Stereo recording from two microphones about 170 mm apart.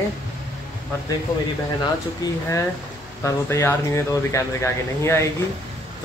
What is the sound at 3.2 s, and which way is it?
Speech, 15° left (ahead or behind).